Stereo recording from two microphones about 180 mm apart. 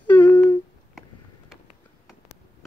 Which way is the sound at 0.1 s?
10° left (ahead or behind).